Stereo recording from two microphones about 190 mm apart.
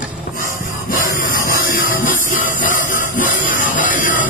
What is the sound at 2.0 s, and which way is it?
Music, 45° left (ahead or behind).